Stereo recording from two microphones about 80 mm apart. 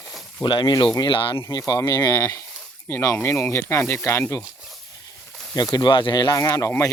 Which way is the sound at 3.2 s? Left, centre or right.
Left.